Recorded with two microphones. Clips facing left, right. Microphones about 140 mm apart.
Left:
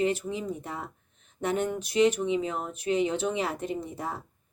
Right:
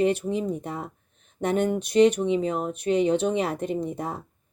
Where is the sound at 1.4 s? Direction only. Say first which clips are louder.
Right 5 dB; 60° right (ahead or behind).